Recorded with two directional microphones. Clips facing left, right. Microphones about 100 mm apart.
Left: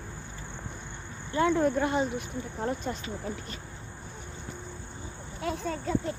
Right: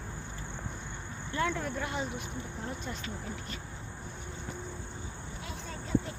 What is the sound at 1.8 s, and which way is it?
Speech, 35° left (ahead or behind).